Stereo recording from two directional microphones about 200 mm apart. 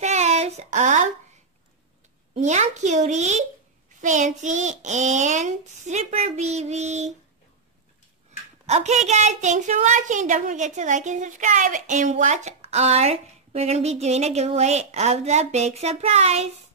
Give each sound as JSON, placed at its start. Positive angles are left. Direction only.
{"t": 0.0, "sound": "a sound", "side_deg": -35}
{"t": 2.3, "sound": "a woman's voice", "side_deg": -35}
{"t": 8.6, "sound": "a woman's voice", "side_deg": -35}